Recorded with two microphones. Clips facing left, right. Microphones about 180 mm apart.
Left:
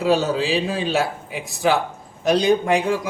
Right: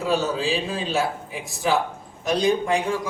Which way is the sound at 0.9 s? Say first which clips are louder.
Left 2 dB; 80° left.